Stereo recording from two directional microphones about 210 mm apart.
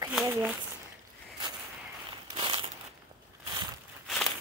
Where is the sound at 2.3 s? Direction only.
25° right (ahead or behind).